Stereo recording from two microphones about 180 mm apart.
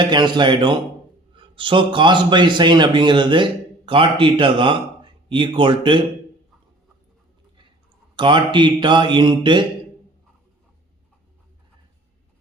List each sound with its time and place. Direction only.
0.0 s a man's voice: 25° right (ahead or behind)
8.1 s speech: 25° right (ahead or behind)